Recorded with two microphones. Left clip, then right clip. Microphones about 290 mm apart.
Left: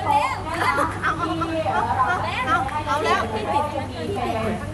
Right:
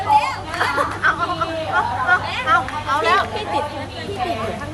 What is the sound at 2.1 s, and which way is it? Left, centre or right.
Speech, centre.